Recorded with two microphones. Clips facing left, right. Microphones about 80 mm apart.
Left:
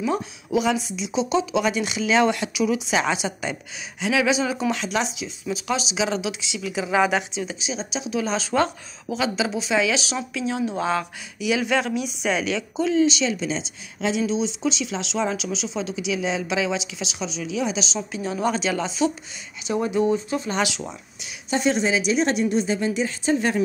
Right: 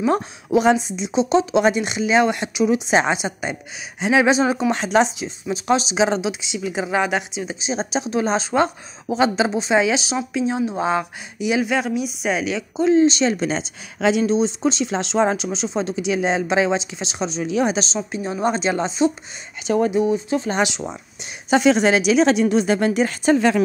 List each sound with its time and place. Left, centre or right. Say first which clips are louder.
0.0 s a woman's voice: right 5 dB; right
4.0 s speech: right 5 dB; right
6.9 s a woman's voice: left 2 dB; centre
7.7 s speech: right 6 dB; right
8.4 s a woman's voice: right 3 dB; right
9.2 s a woman's voice: right 6 dB; right
11.6 s a woman's voice: right 2 dB; centre
12.8 s speech: right 5 dB; right
17.9 s a woman's voice: right 2 dB; right
20.2 s a woman's voice: right 4 dB; right
21.5 s a woman's voice: right 6 dB; right